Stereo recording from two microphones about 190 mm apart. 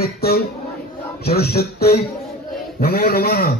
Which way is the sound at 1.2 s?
55° left (ahead or behind).